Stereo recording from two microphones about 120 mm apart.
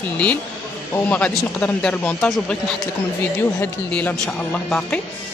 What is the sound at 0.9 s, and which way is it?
Speech, 15° left (ahead or behind).